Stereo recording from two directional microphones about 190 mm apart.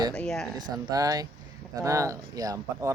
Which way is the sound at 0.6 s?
20° right (ahead or behind).